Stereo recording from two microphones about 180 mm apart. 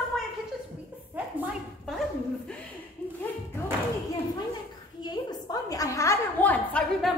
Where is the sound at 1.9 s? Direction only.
Centre (ahead or behind).